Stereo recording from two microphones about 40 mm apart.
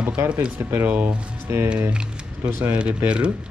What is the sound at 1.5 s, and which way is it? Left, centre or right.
Speech, right.